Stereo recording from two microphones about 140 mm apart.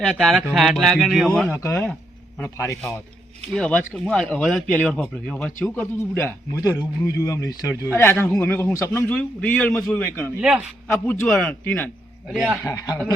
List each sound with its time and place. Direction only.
0.0 s speech: centre (ahead or behind)
1.5 s a man's voice: 20° left (ahead or behind)
3.5 s a man's voice: 10° left (ahead or behind); by 7.8 s 25° left (ahead or behind)
7.9 s a man's voice: 10° left (ahead or behind)
10.4 s speech: 5° right (ahead or behind)
11.0 s a man's voice: 10° left (ahead or behind)
12.3 s speech: 5° right (ahead or behind)
12.6 s a man's voice: 25° left (ahead or behind)